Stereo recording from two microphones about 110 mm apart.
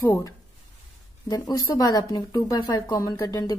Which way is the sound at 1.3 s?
35° left (ahead or behind).